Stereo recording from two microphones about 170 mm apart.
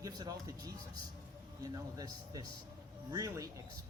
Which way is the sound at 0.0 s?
20° right (ahead or behind).